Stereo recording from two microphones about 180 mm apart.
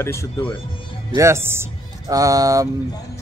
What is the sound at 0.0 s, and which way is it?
Speech, 15° left (ahead or behind).